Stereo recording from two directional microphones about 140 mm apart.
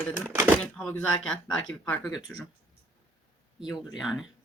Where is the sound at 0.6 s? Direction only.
10° left (ahead or behind).